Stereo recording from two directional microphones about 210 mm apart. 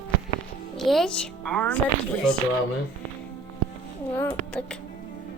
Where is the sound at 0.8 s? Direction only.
Centre (ahead or behind).